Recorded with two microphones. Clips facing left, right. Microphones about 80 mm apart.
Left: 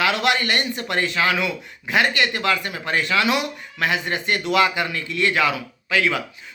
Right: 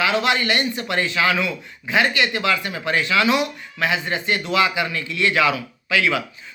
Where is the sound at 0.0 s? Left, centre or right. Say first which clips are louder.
Right 1 dB; left.